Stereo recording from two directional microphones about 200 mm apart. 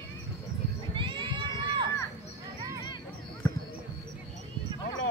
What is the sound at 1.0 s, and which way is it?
Crowd, 25° right (ahead or behind).